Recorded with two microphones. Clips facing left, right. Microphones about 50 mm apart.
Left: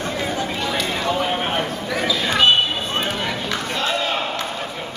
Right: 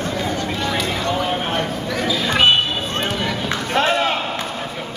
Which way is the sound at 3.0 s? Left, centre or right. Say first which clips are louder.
Right 1 dB; centre.